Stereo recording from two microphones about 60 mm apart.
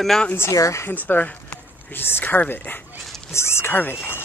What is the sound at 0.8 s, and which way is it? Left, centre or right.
Speech, left.